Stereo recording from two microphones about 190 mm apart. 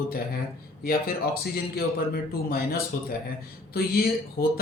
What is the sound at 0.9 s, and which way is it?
Speech, 55° left (ahead or behind).